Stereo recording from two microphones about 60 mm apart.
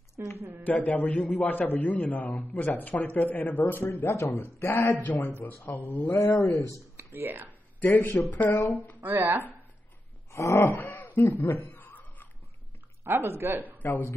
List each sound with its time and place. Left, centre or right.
0.2 s speech: right
0.7 s a man's voice: left
5.7 s a man's voice: left
6.3 s a man's voice: left
7.2 s speech: right
7.8 s a man's voice: left
9.0 s speech: right
10.3 s a sound: left
10.8 s a sound: left
13.0 s speech: right